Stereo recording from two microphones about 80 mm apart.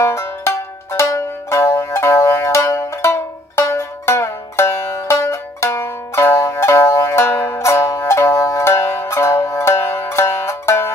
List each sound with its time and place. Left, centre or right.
0.0 s music: left